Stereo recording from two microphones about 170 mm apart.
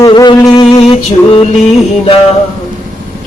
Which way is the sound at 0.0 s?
25° left (ahead or behind).